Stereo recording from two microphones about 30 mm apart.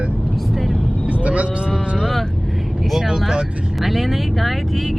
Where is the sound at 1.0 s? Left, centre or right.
Right.